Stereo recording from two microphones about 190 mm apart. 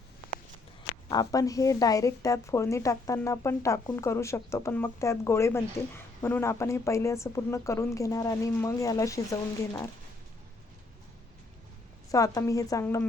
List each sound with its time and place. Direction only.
1.1 s a woman's voice: 20° left (ahead or behind)
12.1 s a woman's voice: 15° left (ahead or behind)